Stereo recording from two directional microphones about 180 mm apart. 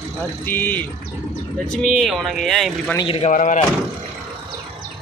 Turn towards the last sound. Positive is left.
turn(degrees=45)  # may be behind; listen again after turning